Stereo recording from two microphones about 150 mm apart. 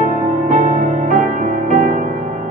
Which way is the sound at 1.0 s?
60° right (ahead or behind).